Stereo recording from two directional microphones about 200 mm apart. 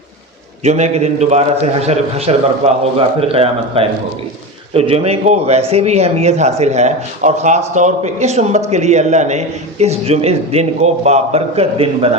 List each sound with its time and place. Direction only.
0.6 s speech: 35° right (ahead or behind)